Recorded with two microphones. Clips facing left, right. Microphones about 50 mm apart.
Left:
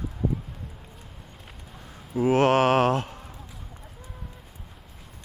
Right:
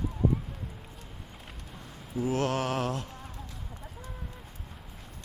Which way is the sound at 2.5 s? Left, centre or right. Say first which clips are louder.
Left 10 dB; left.